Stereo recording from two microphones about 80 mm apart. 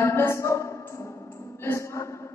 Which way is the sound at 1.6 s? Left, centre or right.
Left.